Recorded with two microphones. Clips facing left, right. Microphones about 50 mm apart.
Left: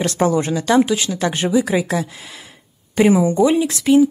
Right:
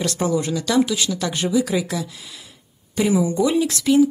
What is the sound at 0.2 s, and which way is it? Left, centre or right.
Speech, left.